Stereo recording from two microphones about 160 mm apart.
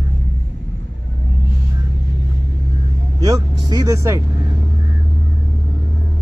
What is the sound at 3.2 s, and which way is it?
Speech, 25° right (ahead or behind).